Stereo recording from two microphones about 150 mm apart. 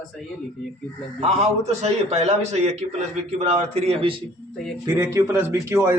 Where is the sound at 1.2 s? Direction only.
45° right (ahead or behind).